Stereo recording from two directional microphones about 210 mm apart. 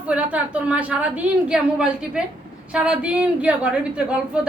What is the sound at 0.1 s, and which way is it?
A woman's voice, 5° right (ahead or behind).